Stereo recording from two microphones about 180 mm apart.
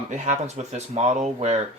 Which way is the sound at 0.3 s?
40° right (ahead or behind).